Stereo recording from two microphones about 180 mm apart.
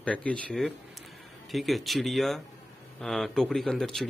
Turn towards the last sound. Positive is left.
turn(degrees=5)  # may be behind; listen again after turning